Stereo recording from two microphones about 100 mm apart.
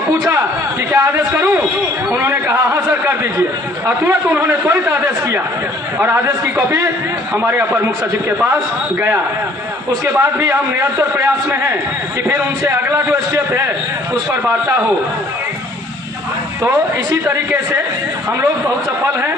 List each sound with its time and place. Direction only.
0.9 s speech: 25° right (ahead or behind)
9.9 s speech: 30° right (ahead or behind)
16.6 s speech: 20° right (ahead or behind)